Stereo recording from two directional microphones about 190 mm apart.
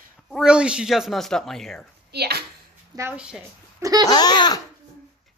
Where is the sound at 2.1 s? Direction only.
55° right (ahead or behind).